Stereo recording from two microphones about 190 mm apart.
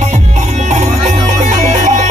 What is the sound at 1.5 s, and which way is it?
Music, 40° right (ahead or behind).